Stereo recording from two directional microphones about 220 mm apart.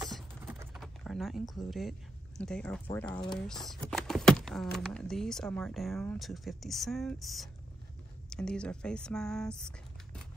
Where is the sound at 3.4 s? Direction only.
Centre (ahead or behind).